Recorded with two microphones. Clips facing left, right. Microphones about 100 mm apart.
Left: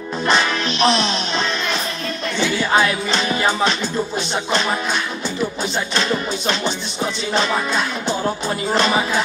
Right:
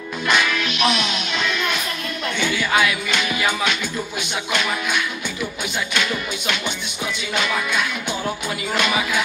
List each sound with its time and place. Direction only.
0.3 s music: 30° left (ahead or behind)